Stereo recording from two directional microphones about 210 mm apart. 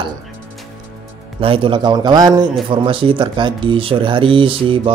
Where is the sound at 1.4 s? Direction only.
25° right (ahead or behind).